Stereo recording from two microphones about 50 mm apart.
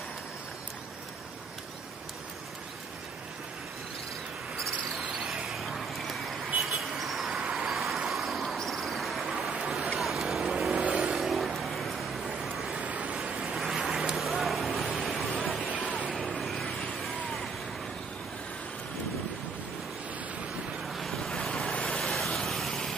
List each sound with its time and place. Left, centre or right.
4.6 s cricket: centre
5.0 s cricket: right; by 6.3 s centre
6.6 s vehicle: centre
7.3 s vehicle: centre
7.7 s vehicle: centre
8.5 s a sound: centre
9.9 s vehicle: centre
10.7 s vehicle: centre
11.1 s vehicle: centre
12.7 s vehicle: right
13.6 s vehicle: centre
20.8 s waves: centre
21.4 s vehicle: centre
22.0 s vehicle: centre